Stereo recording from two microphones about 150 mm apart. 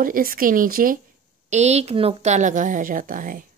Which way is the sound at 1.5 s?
50° right (ahead or behind).